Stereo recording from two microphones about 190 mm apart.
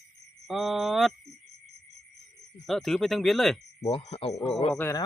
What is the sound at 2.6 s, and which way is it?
Speech, centre (ahead or behind).